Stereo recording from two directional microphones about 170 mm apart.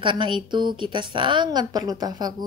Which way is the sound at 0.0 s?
30° right (ahead or behind).